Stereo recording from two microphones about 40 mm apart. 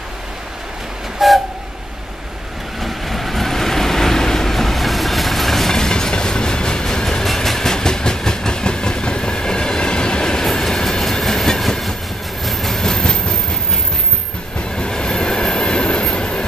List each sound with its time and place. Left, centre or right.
1.2 s train: centre
2.8 s vehicle: centre
7.2 s train: centre
14.8 s train: centre